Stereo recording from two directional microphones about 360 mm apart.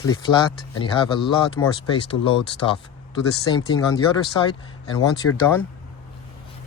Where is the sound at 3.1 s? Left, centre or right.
Centre.